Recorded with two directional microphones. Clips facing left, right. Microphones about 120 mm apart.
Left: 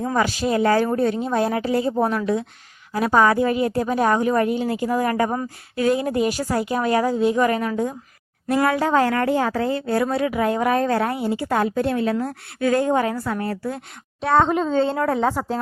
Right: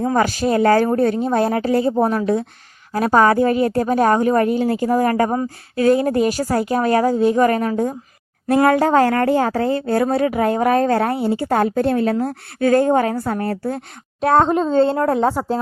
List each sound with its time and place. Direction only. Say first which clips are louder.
0.0 s speech: right 4 dB; 40° right (ahead or behind)
14.4 s speech: right 4 dB; 35° right (ahead or behind)